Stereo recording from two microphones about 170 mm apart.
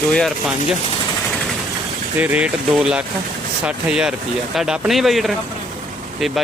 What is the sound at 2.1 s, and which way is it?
Speech, 10° right (ahead or behind).